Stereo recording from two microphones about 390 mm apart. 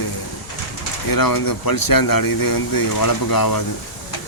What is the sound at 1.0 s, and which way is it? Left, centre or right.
Speech, left.